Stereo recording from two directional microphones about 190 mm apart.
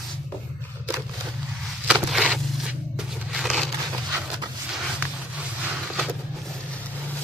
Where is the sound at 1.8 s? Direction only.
5° right (ahead or behind).